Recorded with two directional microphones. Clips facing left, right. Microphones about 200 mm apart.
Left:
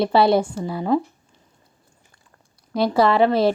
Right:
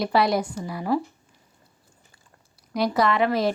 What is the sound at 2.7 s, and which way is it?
Speech, 30° left (ahead or behind).